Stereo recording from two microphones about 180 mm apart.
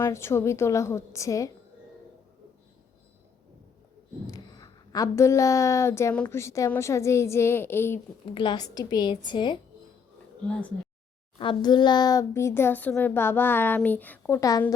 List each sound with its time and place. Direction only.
0.0 s a woman's voice: 15° left (ahead or behind)
4.3 s a woman's voice: 20° left (ahead or behind)
8.4 s a woman's voice: 25° left (ahead or behind)
11.3 s a woman's voice: 25° left (ahead or behind)